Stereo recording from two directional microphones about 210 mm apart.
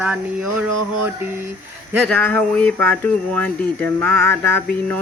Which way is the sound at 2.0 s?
5° left (ahead or behind).